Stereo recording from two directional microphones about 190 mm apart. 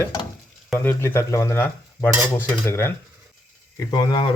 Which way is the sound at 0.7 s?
10° left (ahead or behind).